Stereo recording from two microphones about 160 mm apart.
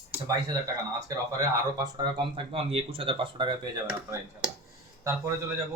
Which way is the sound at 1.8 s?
30° right (ahead or behind).